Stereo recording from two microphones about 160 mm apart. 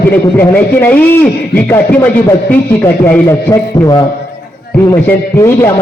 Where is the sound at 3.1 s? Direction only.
20° left (ahead or behind).